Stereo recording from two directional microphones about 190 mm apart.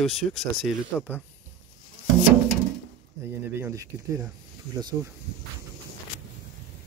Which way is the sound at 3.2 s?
15° right (ahead or behind).